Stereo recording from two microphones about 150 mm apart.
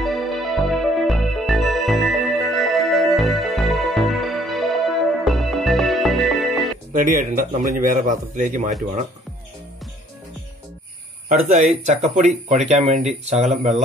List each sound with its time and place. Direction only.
0.0 s music: centre (ahead or behind)
6.9 s a man's voice: 60° right (ahead or behind)
11.2 s speech: 50° right (ahead or behind)